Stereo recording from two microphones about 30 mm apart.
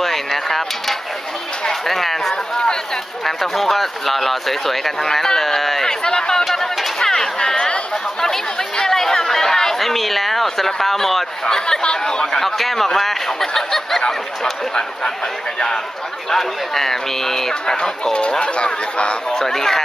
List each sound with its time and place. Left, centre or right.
0.0 s a sound: centre
1.7 s speech: centre
5.0 s speech: centre
5.9 s speech: left
7.0 s a sound: centre
7.3 s speech: left
9.8 s speech: centre
11.4 s speech: left
12.4 s speech: centre
14.0 s speech: left
16.3 s speech: centre
18.4 s speech: left
19.3 s speech: centre